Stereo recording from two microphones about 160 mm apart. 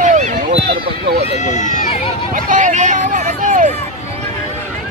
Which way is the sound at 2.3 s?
50° right (ahead or behind).